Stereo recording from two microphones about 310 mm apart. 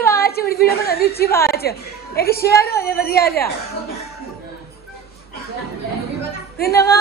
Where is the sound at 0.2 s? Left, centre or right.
Left.